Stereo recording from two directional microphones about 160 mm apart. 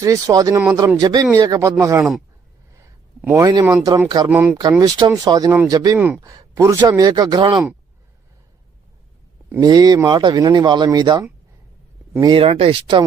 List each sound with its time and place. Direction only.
0.0 s speech: 20° right (ahead or behind)
3.2 s speech: 15° right (ahead or behind)
4.8 s speech: 25° right (ahead or behind)
9.6 s speech: 25° right (ahead or behind)